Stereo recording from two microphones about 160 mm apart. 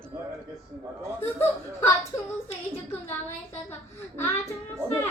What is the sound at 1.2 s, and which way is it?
Speech, 15° left (ahead or behind).